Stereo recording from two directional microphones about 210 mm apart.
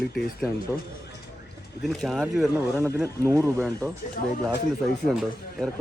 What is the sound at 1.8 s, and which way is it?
Speech, centre (ahead or behind).